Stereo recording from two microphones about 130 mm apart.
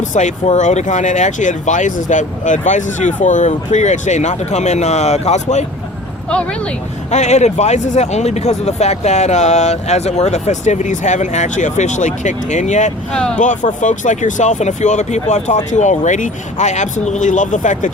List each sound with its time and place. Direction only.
0.1 s speech: 65° left (ahead or behind)
7.1 s speech: 60° left (ahead or behind)
13.1 s speech: 5° left (ahead or behind)
13.4 s speech: 70° left (ahead or behind)